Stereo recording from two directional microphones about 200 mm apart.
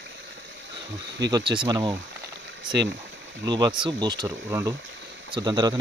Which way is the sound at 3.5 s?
20° right (ahead or behind).